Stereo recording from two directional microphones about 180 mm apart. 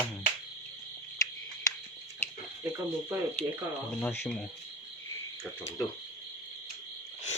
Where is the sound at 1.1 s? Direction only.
15° left (ahead or behind).